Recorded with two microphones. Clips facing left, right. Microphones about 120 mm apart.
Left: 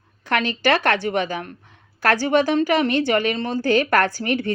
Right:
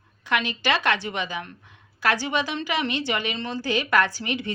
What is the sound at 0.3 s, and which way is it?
Speech, 45° left (ahead or behind).